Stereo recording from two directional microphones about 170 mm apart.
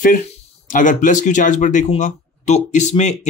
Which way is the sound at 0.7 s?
50° left (ahead or behind).